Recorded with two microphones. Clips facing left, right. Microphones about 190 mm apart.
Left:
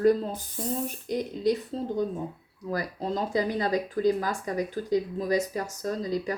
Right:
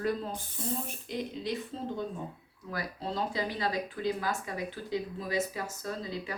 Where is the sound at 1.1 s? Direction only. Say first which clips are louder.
Left 9 dB; 40° left (ahead or behind).